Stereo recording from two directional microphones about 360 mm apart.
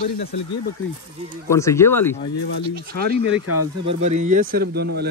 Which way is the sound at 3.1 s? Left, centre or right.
Right.